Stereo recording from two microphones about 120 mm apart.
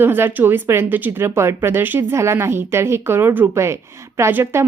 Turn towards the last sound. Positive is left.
turn(degrees=-20)  # may be behind; listen again after turning